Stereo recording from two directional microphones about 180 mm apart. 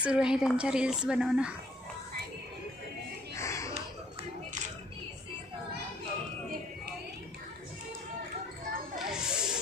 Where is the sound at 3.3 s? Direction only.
15° left (ahead or behind).